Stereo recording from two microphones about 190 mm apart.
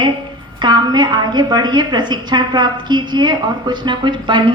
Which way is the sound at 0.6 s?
25° right (ahead or behind).